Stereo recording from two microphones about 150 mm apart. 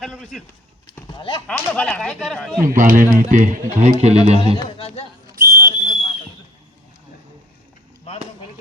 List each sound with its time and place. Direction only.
0.0 s speech: 5° left (ahead or behind)
1.1 s speech: 35° left (ahead or behind)
1.5 s speech: 10° left (ahead or behind)
2.6 s speech: 60° right (ahead or behind); by 4.4 s 45° right (ahead or behind)
4.8 s speech: 40° left (ahead or behind)
5.3 s whistle: 70° right (ahead or behind)
5.7 s a sound: 40° left (ahead or behind)
8.1 s a sound: 40° left (ahead or behind)